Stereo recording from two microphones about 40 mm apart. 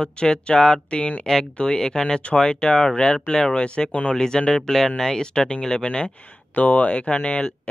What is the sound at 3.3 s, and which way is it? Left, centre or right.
Speech, centre.